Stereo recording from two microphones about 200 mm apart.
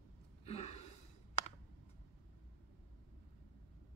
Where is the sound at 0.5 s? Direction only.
30° left (ahead or behind).